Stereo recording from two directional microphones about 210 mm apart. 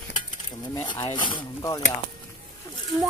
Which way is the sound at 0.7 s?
15° left (ahead or behind).